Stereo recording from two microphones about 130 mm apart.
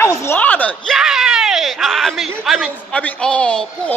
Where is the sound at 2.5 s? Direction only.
Centre (ahead or behind).